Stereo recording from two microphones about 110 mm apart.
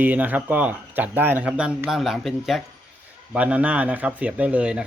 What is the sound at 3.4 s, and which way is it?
A man's voice, 10° right (ahead or behind).